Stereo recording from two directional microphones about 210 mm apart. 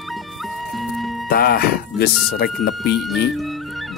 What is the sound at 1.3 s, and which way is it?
Speech, 45° left (ahead or behind).